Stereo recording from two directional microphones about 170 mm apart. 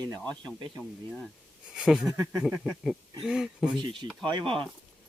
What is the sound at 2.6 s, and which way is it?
Speech, centre (ahead or behind).